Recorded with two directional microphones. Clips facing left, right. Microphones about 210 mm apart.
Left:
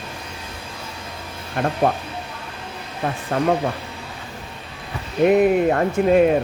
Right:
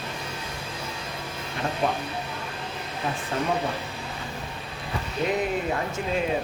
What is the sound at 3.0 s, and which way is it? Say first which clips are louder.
Speech: left 5 dB; 55° left (ahead or behind).